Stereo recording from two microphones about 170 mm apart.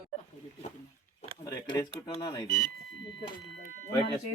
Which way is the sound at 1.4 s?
20° left (ahead or behind).